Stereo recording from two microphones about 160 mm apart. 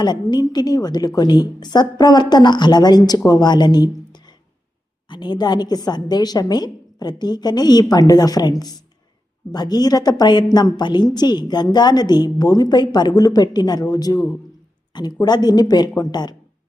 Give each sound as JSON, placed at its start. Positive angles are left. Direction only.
{"t": 0.0, "sound": "a woman's voice", "side_deg": 25}